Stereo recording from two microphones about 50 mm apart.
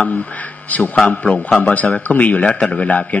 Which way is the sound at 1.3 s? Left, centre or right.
Left.